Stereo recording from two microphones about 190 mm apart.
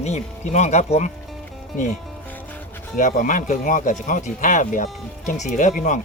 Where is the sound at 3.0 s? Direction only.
45° left (ahead or behind).